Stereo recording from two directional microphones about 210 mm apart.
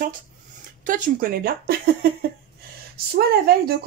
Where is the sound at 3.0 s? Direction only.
45° right (ahead or behind).